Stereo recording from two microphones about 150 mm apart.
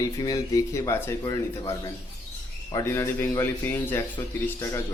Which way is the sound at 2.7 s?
20° left (ahead or behind).